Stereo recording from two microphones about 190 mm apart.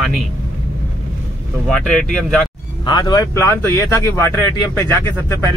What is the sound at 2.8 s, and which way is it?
A man's voice, 25° left (ahead or behind).